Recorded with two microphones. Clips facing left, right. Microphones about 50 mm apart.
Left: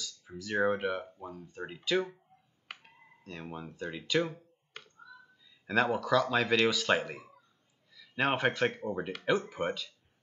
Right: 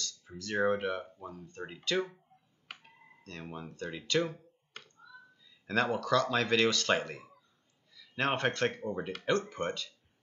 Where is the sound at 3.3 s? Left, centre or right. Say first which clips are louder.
Left 1 dB; centre.